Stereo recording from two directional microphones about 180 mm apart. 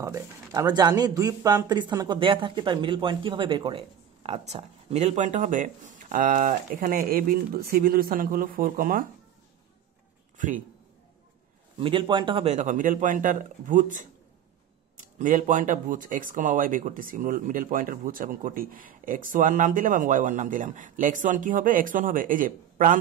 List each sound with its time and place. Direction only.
0.0 s speech: 20° right (ahead or behind); by 9.0 s 50° right (ahead or behind)
10.3 s a man's voice: 45° right (ahead or behind)
11.8 s speech: 30° right (ahead or behind)
12.5 s speech: 45° right (ahead or behind)
15.1 s speech: 45° right (ahead or behind)